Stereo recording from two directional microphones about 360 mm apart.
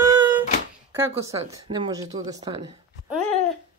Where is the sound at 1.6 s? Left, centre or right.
Centre.